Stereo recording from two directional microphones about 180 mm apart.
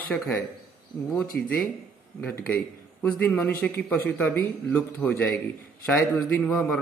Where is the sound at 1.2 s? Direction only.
55° left (ahead or behind).